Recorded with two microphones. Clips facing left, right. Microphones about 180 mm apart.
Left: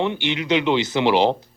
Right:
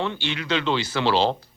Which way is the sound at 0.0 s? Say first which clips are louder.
Left 5 dB; 20° left (ahead or behind).